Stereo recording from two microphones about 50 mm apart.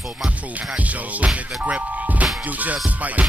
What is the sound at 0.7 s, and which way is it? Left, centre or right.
Music, right.